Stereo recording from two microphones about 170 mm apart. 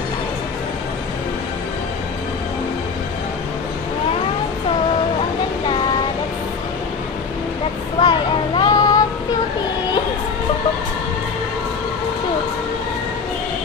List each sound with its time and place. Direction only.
8.0 s child singing: 25° left (ahead or behind)